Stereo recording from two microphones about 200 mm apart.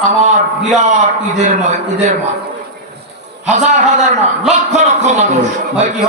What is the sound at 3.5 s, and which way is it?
A man's voice, 35° right (ahead or behind).